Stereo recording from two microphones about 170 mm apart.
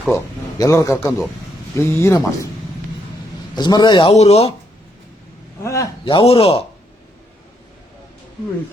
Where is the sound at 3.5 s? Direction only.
25° left (ahead or behind).